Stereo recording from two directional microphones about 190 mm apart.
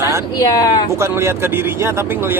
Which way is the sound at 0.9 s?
15° right (ahead or behind).